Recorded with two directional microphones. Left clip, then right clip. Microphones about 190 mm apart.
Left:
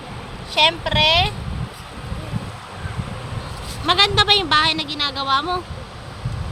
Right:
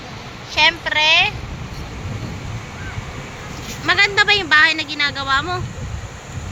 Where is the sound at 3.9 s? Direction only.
15° left (ahead or behind).